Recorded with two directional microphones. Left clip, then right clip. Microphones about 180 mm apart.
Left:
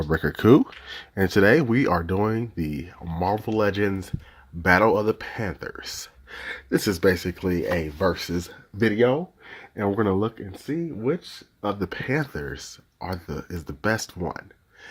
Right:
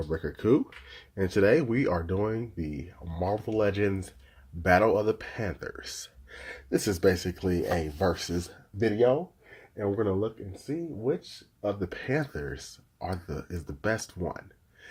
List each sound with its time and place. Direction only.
0.1 s speech: 35° left (ahead or behind); by 8.5 s 20° left (ahead or behind)
8.8 s speech: 40° left (ahead or behind)
11.6 s speech: 35° left (ahead or behind)
11.9 s speech: 20° left (ahead or behind)